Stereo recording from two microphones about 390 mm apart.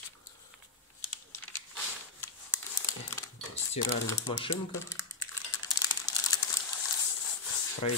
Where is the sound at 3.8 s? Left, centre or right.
Centre.